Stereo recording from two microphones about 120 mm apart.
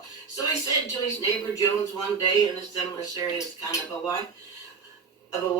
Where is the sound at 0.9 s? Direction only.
30° left (ahead or behind).